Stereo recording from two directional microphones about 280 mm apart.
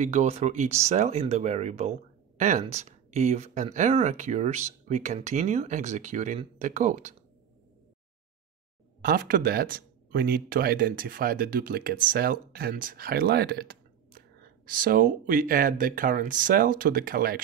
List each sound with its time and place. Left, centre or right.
0.0 s speech: right
9.0 s speech: right